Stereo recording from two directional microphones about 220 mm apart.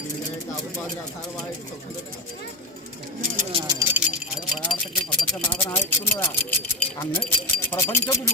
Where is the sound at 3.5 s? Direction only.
20° right (ahead or behind).